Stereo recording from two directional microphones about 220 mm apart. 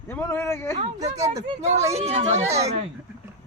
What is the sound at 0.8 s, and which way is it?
Speech, 30° right (ahead or behind).